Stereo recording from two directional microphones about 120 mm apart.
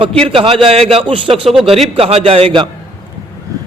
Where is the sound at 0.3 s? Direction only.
50° right (ahead or behind).